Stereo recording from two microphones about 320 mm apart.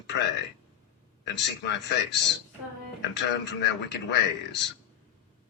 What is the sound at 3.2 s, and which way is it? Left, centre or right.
A man's voice, left.